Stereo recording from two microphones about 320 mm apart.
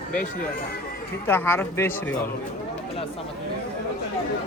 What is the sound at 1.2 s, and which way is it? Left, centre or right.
Speech, centre.